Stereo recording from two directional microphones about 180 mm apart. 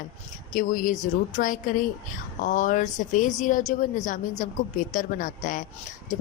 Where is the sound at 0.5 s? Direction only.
50° left (ahead or behind).